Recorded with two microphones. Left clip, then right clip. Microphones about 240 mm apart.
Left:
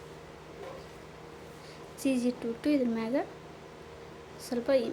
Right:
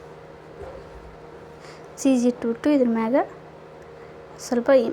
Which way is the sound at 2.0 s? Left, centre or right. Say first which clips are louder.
Right 10 dB; centre.